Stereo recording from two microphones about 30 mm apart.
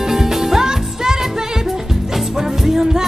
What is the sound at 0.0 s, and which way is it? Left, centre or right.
Music, centre.